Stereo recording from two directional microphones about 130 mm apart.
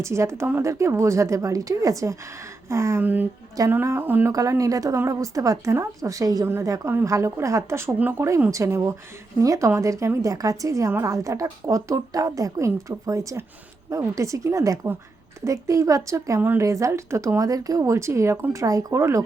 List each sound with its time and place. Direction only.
0.0 s a woman's voice: 20° right (ahead or behind)
4.4 s a woman's voice: 25° right (ahead or behind)